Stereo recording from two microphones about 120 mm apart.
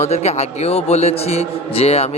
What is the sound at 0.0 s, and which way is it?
A man's voice, 65° left (ahead or behind).